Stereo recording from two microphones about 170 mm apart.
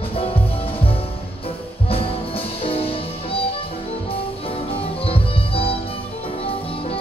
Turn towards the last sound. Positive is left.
turn(degrees=35)  # may be behind; listen again after turning